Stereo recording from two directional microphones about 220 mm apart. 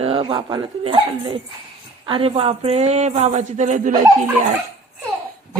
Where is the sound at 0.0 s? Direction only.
25° right (ahead or behind).